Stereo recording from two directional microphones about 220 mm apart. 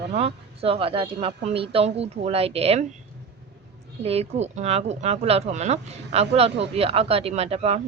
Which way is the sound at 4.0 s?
30° right (ahead or behind).